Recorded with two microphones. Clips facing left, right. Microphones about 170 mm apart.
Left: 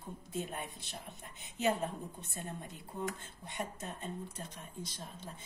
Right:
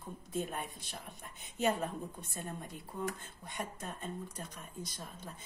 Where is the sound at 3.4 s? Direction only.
50° right (ahead or behind).